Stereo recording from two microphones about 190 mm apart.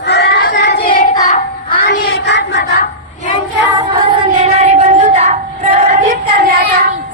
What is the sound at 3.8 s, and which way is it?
Child singing, 25° right (ahead or behind).